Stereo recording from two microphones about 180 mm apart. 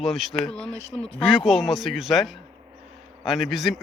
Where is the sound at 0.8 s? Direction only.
35° left (ahead or behind).